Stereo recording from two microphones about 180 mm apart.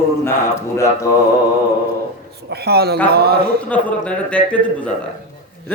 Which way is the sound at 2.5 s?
60° right (ahead or behind).